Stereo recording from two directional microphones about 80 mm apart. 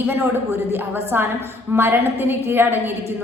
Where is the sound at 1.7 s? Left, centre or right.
Right.